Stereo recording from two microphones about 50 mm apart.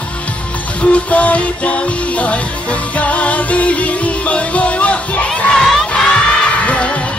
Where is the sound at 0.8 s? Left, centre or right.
Left.